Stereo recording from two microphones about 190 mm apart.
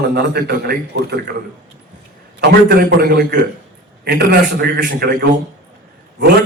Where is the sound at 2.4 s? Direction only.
55° right (ahead or behind).